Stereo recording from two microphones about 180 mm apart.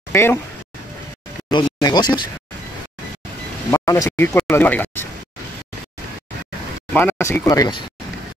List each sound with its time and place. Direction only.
0.1 s speech: 15° left (ahead or behind)
1.5 s speech: 25° left (ahead or behind)
3.7 s speech: 20° left (ahead or behind)
6.9 s speech: 10° left (ahead or behind)